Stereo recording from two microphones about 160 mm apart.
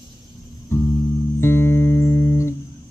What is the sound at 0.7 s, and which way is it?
Music, 15° left (ahead or behind).